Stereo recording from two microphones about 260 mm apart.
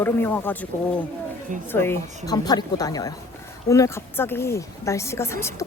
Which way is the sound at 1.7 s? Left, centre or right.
Centre.